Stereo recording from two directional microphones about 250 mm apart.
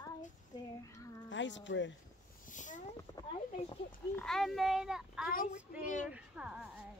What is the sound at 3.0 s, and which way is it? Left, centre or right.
Speech, centre.